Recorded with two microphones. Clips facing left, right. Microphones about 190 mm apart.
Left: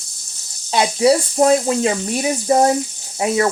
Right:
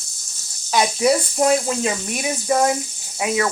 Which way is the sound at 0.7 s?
30° left (ahead or behind).